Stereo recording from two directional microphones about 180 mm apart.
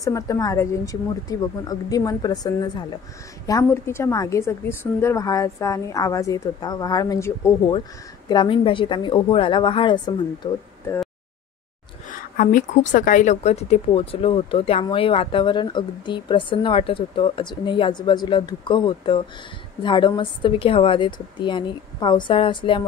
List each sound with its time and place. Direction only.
0.0 s a woman's voice: 20° left (ahead or behind)
8.3 s a woman's voice: 25° left (ahead or behind)
12.1 s a woman's voice: 50° left (ahead or behind); by 22.8 s 25° left (ahead or behind)